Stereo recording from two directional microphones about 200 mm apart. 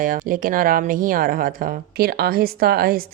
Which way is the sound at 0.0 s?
45° right (ahead or behind).